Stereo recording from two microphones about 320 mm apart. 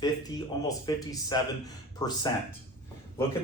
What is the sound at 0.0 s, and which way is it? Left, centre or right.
Speech, centre.